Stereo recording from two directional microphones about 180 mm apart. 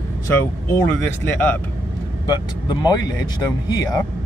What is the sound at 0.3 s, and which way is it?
Speech, 10° left (ahead or behind).